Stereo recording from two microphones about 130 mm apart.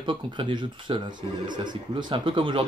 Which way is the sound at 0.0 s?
40° right (ahead or behind).